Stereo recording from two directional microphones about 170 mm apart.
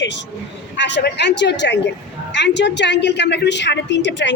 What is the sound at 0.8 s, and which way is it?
A woman's voice, 90° left.